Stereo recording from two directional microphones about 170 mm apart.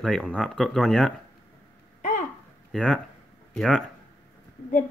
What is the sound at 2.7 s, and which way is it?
Speech, 5° left (ahead or behind).